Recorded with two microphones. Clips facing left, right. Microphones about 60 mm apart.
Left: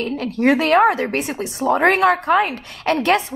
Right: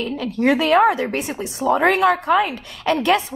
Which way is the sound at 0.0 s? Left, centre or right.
Left.